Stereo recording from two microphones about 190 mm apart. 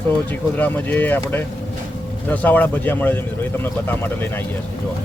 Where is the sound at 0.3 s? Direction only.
10° left (ahead or behind).